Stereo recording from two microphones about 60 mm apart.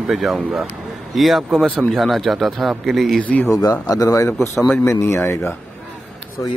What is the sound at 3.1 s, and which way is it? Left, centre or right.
Speech, left.